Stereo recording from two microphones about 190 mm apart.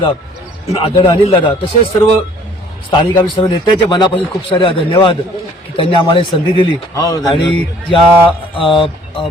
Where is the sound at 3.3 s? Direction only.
25° left (ahead or behind).